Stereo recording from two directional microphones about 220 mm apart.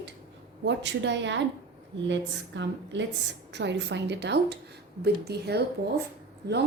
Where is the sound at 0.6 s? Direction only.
55° right (ahead or behind).